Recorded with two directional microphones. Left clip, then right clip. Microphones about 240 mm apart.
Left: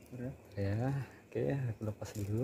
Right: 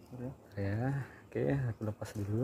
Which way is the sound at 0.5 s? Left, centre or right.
Centre.